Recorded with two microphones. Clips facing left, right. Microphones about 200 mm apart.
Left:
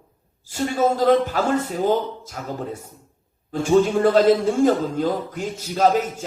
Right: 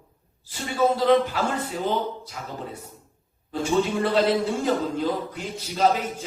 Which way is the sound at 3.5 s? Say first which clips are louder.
Left 6 dB; 45° left (ahead or behind).